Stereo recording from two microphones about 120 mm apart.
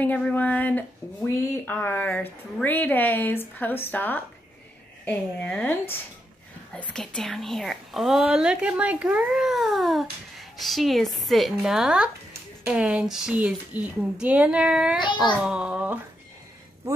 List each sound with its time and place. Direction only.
0.0 s a woman's voice: 15° left (ahead or behind); by 16.0 s 10° right (ahead or behind)